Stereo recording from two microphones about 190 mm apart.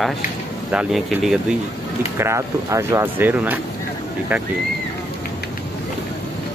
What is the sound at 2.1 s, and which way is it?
Speech, 15° right (ahead or behind).